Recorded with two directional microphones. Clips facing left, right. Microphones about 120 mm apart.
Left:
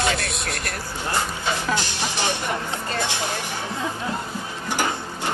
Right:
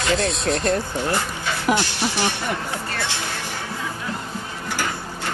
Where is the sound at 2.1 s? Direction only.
20° left (ahead or behind).